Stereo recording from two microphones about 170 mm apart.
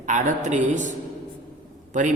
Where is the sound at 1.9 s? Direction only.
45° right (ahead or behind).